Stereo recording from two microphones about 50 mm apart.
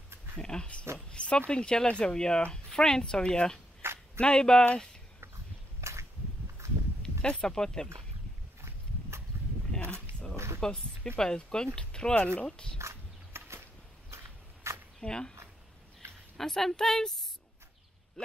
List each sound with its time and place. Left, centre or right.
0.4 s speech: centre
3.8 s a sound: right
4.2 s speech: centre
5.8 s a sound: right
7.0 s speech: centre
8.5 s horse: right
10.3 s a sound: right
10.6 s speech: centre
12.7 s a sound: right
14.1 s walk: right
15.0 s speech: centre
16.3 s speech: centre